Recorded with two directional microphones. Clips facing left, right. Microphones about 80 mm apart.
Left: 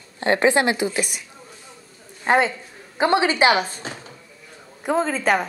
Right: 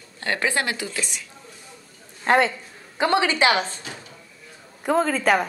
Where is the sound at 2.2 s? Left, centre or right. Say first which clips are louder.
Even; centre.